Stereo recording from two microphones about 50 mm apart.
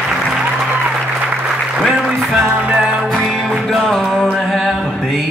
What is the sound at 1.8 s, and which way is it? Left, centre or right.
Applause, centre.